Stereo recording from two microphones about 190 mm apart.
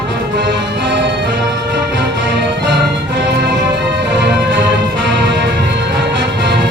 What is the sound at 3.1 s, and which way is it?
Music, 65° right (ahead or behind).